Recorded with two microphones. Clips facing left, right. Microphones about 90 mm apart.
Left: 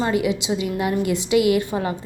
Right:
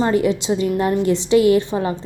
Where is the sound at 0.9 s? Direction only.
30° right (ahead or behind).